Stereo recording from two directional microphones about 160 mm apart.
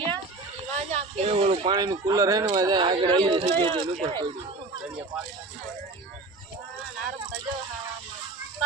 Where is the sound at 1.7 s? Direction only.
25° right (ahead or behind).